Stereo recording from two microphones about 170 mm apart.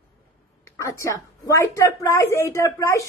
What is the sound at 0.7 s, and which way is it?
A woman's voice, 20° left (ahead or behind).